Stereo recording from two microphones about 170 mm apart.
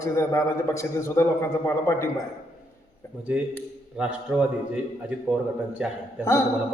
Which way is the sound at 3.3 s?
5° right (ahead or behind).